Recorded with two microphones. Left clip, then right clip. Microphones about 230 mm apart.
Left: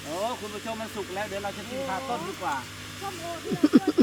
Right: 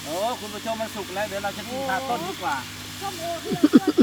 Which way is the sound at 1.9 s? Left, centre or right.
Right.